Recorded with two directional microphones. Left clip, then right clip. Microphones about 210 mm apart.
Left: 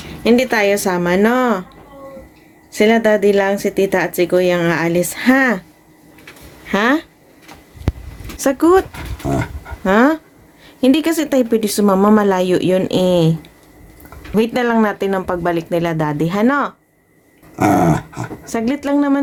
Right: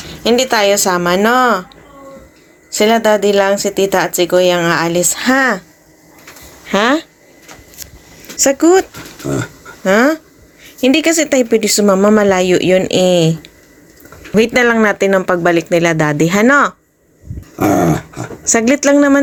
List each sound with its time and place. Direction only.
0.1 s speech: 10° left (ahead or behind)
6.7 s speech: centre (ahead or behind)
8.4 s speech: 5° left (ahead or behind)
18.4 s speech: 15° right (ahead or behind)